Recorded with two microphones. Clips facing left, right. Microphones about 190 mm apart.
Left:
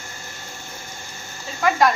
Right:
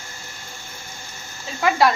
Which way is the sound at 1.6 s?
15° right (ahead or behind).